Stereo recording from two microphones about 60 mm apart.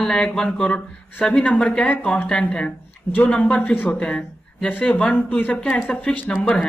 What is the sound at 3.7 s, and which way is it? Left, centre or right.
Speech, left.